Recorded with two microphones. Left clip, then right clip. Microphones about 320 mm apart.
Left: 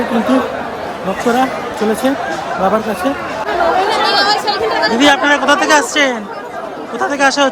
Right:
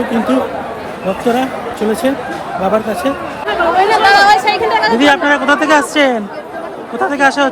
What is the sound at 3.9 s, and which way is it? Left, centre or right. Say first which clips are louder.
Chatter: right 5 dB; right.